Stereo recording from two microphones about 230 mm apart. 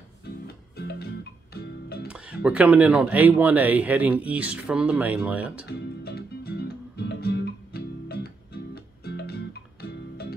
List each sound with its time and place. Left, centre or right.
0.7 s music: left
2.0 s speech: centre
5.7 s music: left